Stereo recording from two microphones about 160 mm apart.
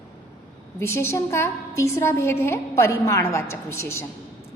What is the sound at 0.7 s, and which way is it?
A woman's voice, 15° left (ahead or behind).